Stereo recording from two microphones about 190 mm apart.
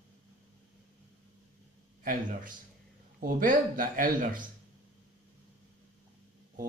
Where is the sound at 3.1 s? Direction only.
45° right (ahead or behind).